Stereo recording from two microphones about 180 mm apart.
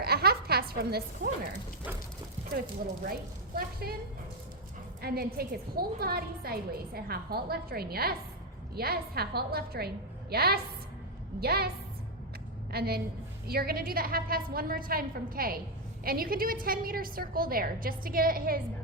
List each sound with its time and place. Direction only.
0.0 s a sound: 60° right (ahead or behind)
3.1 s a woman's voice: 55° right (ahead or behind)
5.0 s a woman's voice: 60° right (ahead or behind)
12.7 s a woman's voice: 60° right (ahead or behind)